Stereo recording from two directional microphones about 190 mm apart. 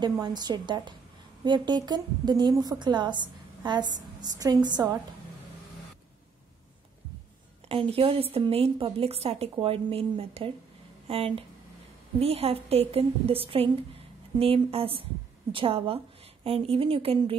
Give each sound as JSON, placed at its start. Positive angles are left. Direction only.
{"t": 0.0, "sound": "a woman's voice", "side_deg": -20}
{"t": 7.6, "sound": "a woman's voice", "side_deg": -30}